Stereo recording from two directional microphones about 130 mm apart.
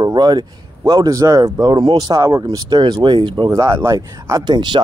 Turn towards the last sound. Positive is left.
turn(degrees=-35)  # may be behind; listen again after turning